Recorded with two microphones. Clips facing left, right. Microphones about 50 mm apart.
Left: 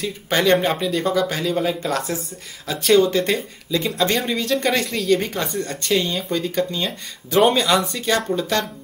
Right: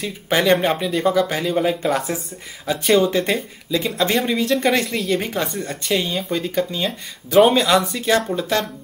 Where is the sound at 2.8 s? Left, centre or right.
Centre.